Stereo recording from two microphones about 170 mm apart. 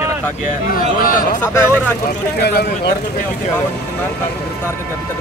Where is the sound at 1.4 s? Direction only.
15° left (ahead or behind).